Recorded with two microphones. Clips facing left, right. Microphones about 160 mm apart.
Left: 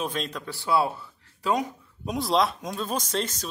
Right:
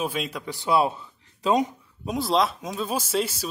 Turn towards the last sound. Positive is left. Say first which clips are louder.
# right 3 dB
turn(degrees=-10)  # may be behind; listen again after turning